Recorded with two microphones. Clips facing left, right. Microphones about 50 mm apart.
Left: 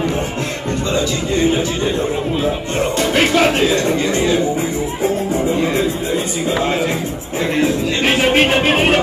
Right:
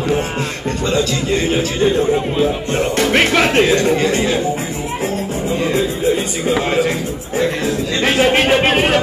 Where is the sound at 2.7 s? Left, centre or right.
Right.